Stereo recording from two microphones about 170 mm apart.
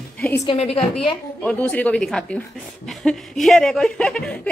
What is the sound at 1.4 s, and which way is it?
A man's voice, 5° left (ahead or behind).